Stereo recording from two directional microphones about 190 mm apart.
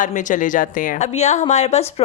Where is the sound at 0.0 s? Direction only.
40° left (ahead or behind).